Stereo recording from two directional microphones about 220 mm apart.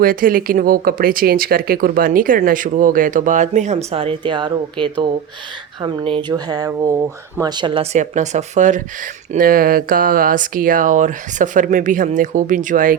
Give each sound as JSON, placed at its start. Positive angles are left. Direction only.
{"t": 0.0, "sound": "speech", "side_deg": -40}